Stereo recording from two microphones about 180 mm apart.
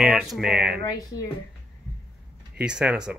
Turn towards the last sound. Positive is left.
turn(degrees=-5)  # may be behind; listen again after turning